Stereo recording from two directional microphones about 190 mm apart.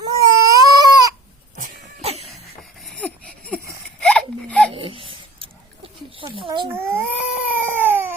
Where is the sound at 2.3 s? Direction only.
Centre (ahead or behind).